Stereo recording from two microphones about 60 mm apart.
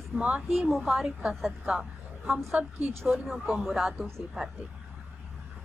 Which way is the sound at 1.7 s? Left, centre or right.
Centre.